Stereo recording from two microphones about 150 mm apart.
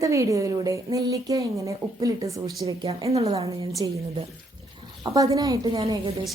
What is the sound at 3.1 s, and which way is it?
Speech, 40° right (ahead or behind).